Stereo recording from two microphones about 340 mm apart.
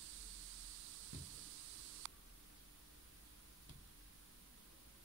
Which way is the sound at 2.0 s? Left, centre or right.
Right.